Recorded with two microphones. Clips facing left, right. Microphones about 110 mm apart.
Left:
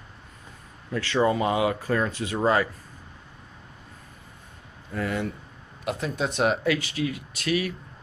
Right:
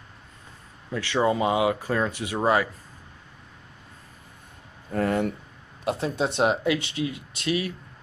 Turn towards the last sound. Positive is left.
turn(degrees=-25)  # may be behind; listen again after turning